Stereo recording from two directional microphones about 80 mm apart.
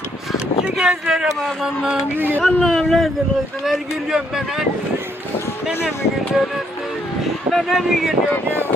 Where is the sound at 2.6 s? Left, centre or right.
Centre.